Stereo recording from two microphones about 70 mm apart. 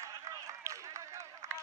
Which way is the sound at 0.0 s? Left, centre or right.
Right.